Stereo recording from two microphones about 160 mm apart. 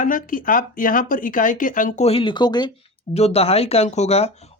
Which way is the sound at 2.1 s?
35° left (ahead or behind).